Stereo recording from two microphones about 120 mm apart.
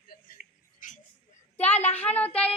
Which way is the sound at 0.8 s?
90° left.